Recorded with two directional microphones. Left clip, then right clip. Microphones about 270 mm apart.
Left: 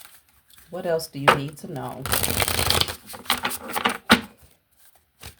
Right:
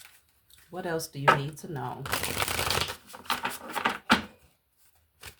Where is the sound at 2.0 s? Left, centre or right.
Left.